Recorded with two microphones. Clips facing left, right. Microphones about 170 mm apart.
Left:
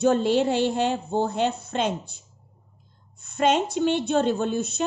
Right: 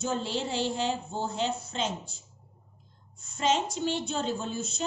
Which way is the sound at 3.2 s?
60° left (ahead or behind).